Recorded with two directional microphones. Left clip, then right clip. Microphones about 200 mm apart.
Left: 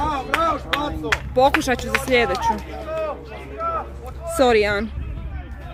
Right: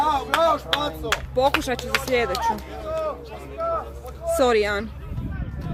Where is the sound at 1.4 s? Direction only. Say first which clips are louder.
Left 5 dB; 25° left (ahead or behind).